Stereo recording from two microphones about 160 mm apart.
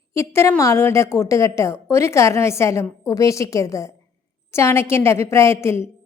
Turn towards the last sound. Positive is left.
turn(degrees=15)  # may be behind; listen again after turning